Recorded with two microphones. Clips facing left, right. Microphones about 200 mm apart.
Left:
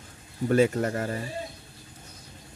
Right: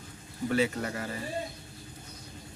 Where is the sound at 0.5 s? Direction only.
45° left (ahead or behind).